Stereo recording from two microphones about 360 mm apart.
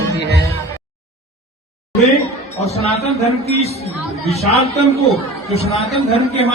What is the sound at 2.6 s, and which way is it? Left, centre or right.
Speech, centre.